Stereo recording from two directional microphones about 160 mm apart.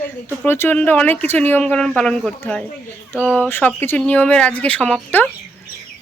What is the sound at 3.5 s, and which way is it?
Speech, 15° left (ahead or behind).